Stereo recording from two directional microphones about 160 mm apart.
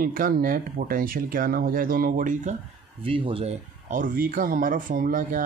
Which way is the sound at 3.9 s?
60° right (ahead or behind).